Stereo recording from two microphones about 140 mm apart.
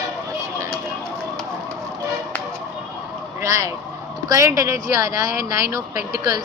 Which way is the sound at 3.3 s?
20° right (ahead or behind).